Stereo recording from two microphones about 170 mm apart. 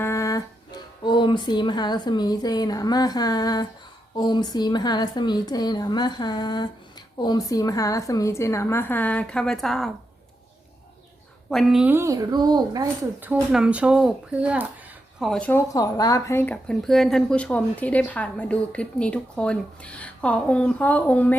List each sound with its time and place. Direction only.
0.0 s a woman's voice: 15° left (ahead or behind); by 9.9 s centre (ahead or behind)
11.5 s a woman's voice: 5° right (ahead or behind); by 12.9 s 25° right (ahead or behind)
13.1 s speech: 10° right (ahead or behind)
15.2 s a woman's voice: 5° left (ahead or behind)
15.7 s a woman's voice: 20° left (ahead or behind)